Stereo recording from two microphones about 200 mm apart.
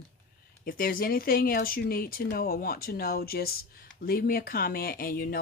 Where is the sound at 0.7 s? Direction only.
45° left (ahead or behind).